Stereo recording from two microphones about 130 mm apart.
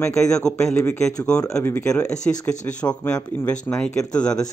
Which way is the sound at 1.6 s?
20° left (ahead or behind).